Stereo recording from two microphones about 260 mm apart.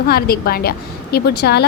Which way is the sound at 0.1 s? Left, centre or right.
Left.